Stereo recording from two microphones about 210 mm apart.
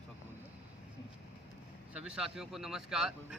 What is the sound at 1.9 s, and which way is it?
Speech, 5° right (ahead or behind).